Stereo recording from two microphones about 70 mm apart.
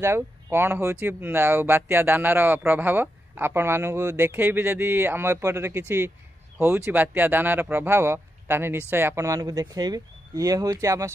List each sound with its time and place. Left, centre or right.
0.0 s speech: right